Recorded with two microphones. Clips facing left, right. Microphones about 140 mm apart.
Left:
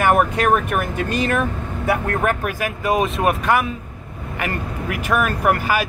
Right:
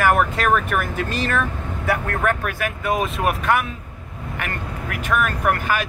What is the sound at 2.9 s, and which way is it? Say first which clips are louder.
Speech: left 4 dB; centre (ahead or behind).